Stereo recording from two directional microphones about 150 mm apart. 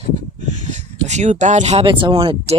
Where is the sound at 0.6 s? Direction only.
50° right (ahead or behind).